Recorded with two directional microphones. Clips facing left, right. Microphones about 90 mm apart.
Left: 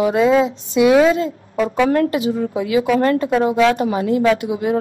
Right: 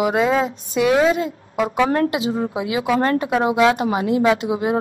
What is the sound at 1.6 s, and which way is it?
Speech, 30° right (ahead or behind).